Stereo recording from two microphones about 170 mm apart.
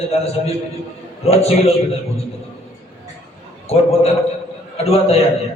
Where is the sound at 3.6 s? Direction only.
35° left (ahead or behind).